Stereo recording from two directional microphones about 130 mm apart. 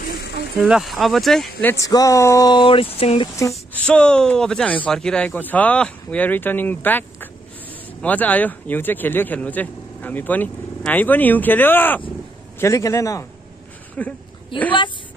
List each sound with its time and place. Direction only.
0.7 s speech: 5° right (ahead or behind)
1.6 s speech: 15° left (ahead or behind)
1.9 s speech: 25° left (ahead or behind); by 3.3 s 50° left (ahead or behind)
3.7 s a man's voice: 10° left (ahead or behind); by 13.3 s 25° left (ahead or behind)
14.0 s speech: 10° left (ahead or behind)
14.5 s speech: 40° left (ahead or behind)